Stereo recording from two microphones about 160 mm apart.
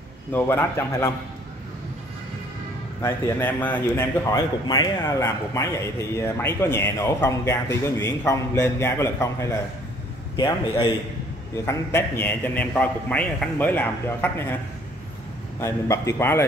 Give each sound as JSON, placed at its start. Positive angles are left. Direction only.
{"t": 0.3, "sound": "speech", "side_deg": 15}
{"t": 3.0, "sound": "a man's voice", "side_deg": 10}
{"t": 11.5, "sound": "speech", "side_deg": 15}
{"t": 15.6, "sound": "speech", "side_deg": 20}